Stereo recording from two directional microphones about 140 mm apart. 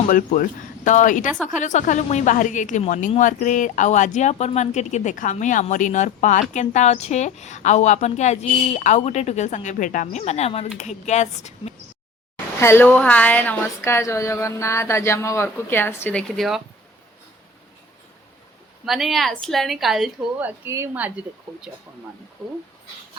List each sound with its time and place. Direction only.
0.1 s speech: 75° left (ahead or behind)
0.9 s a woman's voice: 65° left (ahead or behind)
12.5 s a woman's voice: 15° left (ahead or behind)
18.9 s a woman's voice: centre (ahead or behind)
20.4 s a woman's voice: 20° right (ahead or behind)
22.4 s a woman's voice: centre (ahead or behind)